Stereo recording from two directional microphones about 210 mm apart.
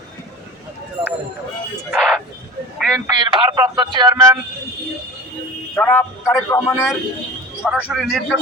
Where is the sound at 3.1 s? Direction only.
20° right (ahead or behind).